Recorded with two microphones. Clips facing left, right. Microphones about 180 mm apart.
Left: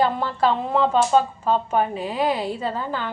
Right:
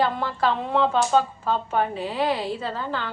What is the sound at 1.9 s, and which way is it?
Speech, 45° left (ahead or behind).